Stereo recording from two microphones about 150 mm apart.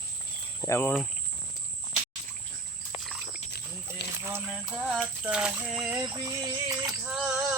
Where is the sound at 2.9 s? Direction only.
Centre (ahead or behind).